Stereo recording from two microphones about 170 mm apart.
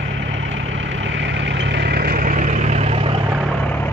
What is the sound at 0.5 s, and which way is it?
Vehicle, 90° right.